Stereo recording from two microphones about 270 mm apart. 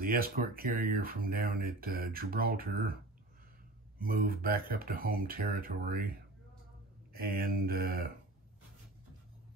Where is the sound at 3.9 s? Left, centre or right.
Right.